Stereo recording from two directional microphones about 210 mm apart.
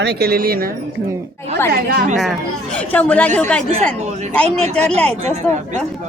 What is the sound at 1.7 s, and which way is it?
Speech, 50° right (ahead or behind).